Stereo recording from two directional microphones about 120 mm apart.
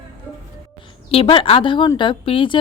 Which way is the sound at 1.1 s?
50° left (ahead or behind).